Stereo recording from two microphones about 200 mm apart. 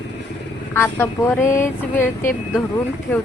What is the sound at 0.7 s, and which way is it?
Speech, 15° left (ahead or behind).